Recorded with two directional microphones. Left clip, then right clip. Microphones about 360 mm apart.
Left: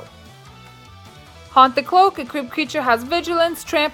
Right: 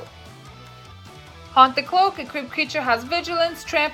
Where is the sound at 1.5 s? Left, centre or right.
Centre.